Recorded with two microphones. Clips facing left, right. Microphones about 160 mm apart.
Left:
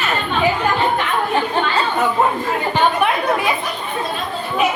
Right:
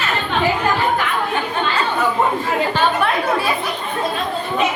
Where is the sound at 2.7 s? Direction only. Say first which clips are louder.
Left 4 dB; 15° left (ahead or behind).